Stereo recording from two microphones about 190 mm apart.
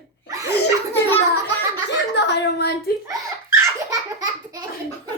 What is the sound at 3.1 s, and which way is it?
Laughter, 20° right (ahead or behind).